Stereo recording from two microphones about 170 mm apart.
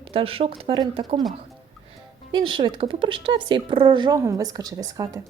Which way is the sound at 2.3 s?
25° right (ahead or behind).